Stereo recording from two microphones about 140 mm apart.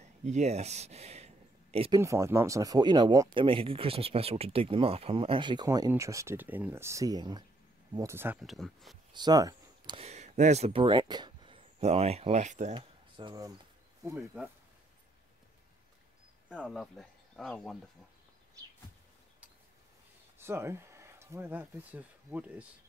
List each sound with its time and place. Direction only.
0.0 s a sound: 55° right (ahead or behind)
1.9 s speech: 20° right (ahead or behind)
3.4 s speech: 40° right (ahead or behind); by 8.4 s 15° right (ahead or behind)
8.4 s speech: centre (ahead or behind)
9.1 s a sound: 30° right (ahead or behind)
9.9 s speech: 50° right (ahead or behind)
12.7 s speech: 35° right (ahead or behind)
14.0 s speech: 20° right (ahead or behind)
16.6 s speech: centre (ahead or behind)
20.3 s speech: 15° right (ahead or behind)